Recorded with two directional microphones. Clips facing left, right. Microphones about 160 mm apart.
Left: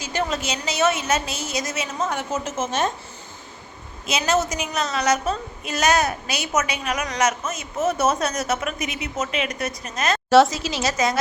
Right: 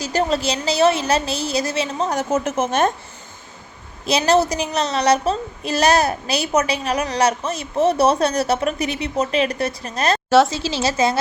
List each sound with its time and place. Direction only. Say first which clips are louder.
0.0 s a woman's voice: right 6 dB; 35° right (ahead or behind)
2.3 s a woman's voice: right 6 dB; 60° right (ahead or behind)
4.0 s a woman's voice: right 5 dB; 35° right (ahead or behind)
10.2 s a woman's voice: left 1 dB; centre (ahead or behind)
10.5 s speech: right 3 dB; 30° right (ahead or behind)